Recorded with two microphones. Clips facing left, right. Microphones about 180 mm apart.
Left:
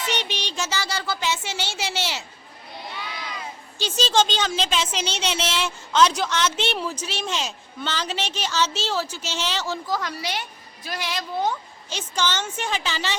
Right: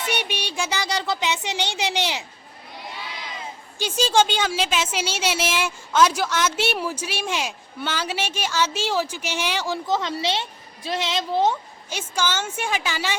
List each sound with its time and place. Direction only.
0.1 s a woman's voice: 10° right (ahead or behind)
3.8 s a woman's voice: 10° right (ahead or behind)
9.9 s a woman's voice: 25° right (ahead or behind)
11.9 s a woman's voice: 10° right (ahead or behind)